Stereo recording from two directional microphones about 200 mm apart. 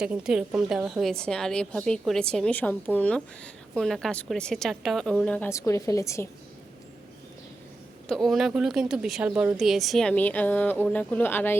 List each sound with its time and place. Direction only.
0.0 s a woman's voice: 5° right (ahead or behind); by 6.2 s 15° left (ahead or behind)
8.0 s a woman's voice: centre (ahead or behind)